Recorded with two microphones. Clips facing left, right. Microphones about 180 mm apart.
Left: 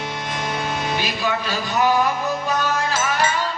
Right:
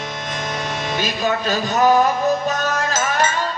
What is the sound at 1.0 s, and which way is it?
Music, 40° right (ahead or behind).